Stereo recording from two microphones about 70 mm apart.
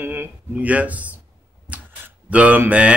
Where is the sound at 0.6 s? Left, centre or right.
Right.